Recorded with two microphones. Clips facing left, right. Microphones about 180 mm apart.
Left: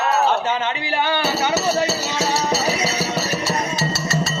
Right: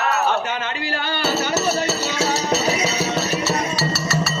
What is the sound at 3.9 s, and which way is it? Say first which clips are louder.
Music: even; 25° left (ahead or behind).